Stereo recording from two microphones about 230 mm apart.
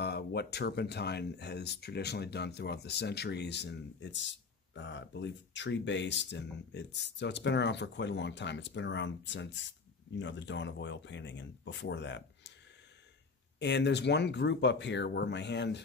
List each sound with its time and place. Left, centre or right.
0.0 s speech: left
13.6 s speech: left